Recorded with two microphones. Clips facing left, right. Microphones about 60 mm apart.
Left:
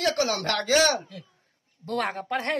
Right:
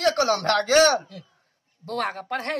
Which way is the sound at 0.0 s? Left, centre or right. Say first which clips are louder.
Right 4 dB; right.